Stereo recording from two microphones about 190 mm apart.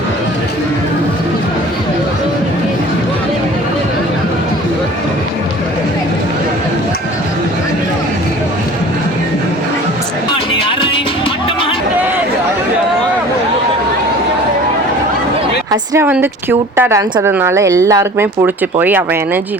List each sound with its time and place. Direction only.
10.7 s music: 25° left (ahead or behind)
15.7 s a woman's voice: 15° right (ahead or behind)